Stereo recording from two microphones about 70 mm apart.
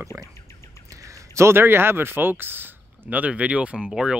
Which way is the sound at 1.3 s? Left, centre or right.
Right.